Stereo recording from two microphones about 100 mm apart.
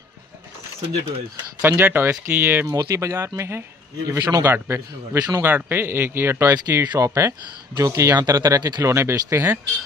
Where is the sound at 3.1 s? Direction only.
25° right (ahead or behind).